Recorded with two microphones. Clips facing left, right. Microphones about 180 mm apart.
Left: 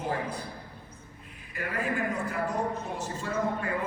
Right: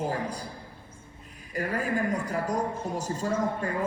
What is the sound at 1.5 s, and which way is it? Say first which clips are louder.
Speech: right 3 dB; 40° right (ahead or behind).